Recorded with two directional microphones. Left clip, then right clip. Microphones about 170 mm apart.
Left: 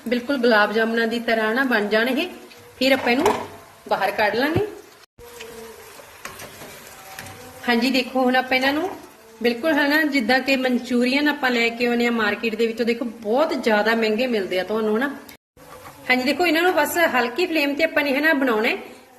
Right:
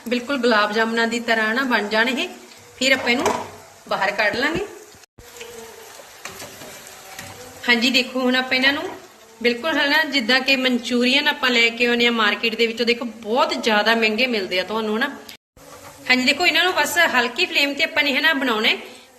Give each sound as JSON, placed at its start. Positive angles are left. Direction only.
{"t": 0.1, "sound": "a woman's voice", "side_deg": 40}
{"t": 3.8, "sound": "a woman's voice", "side_deg": 60}
{"t": 7.6, "sound": "a woman's voice", "side_deg": 55}